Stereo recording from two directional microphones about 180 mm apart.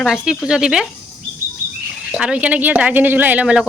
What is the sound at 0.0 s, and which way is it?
Speech, centre (ahead or behind).